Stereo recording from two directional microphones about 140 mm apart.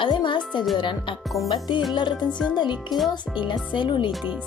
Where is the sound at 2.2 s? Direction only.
5° left (ahead or behind).